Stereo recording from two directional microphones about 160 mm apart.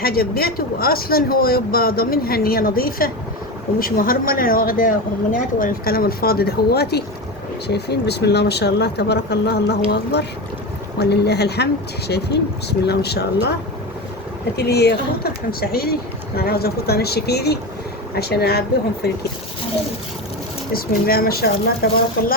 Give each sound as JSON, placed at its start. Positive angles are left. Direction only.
{"t": 0.0, "sound": "speech", "side_deg": 70}
{"t": 14.5, "sound": "speech", "side_deg": 90}
{"t": 15.6, "sound": "speech", "side_deg": 75}
{"t": 20.7, "sound": "speech", "side_deg": 70}